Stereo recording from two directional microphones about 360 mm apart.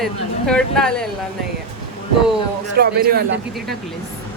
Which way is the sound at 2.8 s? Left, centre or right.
Right.